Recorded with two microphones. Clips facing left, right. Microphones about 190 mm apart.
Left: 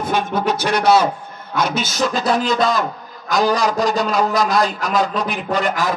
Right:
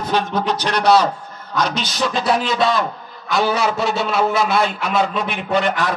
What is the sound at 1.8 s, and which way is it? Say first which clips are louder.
Speech: left 2 dB; 45° left (ahead or behind).